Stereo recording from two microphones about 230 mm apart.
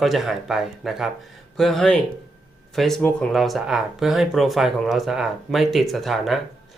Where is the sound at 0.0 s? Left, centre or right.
Centre.